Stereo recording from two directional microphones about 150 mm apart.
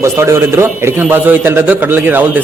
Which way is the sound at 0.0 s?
20° right (ahead or behind).